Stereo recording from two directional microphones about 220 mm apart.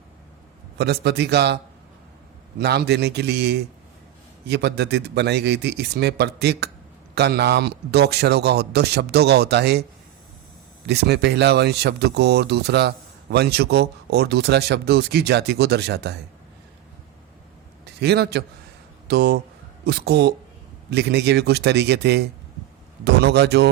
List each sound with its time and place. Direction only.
0.8 s speech: 50° right (ahead or behind)
2.6 s speech: 50° right (ahead or behind)
10.8 s speech: 50° right (ahead or behind)
17.8 s a man's voice: 50° right (ahead or behind)